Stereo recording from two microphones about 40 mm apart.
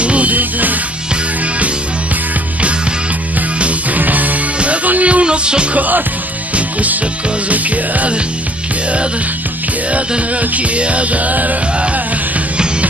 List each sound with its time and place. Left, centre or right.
0.0 s music: right
3.5 s music: right
4.0 s music: right
5.8 s speech: right
6.5 s music: right
9.9 s music: right